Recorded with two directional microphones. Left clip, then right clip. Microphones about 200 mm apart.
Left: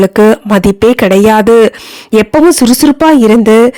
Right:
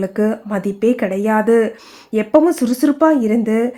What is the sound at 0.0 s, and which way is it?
Speech, 45° left (ahead or behind).